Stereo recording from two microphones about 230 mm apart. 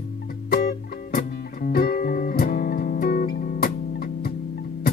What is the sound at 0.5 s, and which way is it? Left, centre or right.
Music, left.